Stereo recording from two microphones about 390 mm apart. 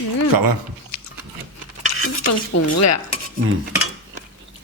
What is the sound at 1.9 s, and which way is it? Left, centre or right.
Stir, left.